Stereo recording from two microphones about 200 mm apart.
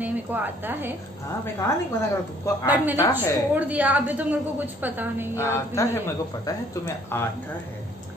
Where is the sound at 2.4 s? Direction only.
15° left (ahead or behind).